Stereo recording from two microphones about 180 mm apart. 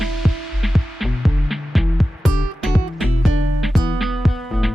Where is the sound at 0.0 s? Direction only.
Centre (ahead or behind).